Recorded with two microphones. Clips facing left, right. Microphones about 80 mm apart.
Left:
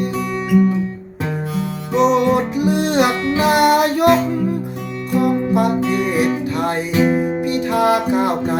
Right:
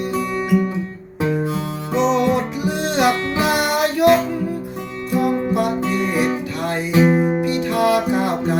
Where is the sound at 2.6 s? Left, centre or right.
Left.